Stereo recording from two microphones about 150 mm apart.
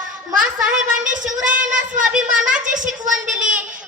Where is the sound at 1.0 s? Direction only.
60° right (ahead or behind).